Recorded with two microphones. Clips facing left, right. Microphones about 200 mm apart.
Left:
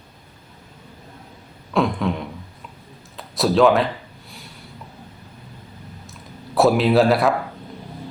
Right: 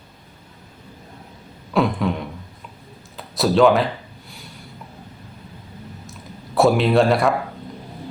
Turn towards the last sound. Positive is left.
turn(degrees=0)  # may be behind; listen again after turning